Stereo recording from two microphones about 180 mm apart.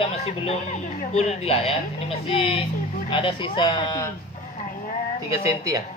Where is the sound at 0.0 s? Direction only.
35° left (ahead or behind).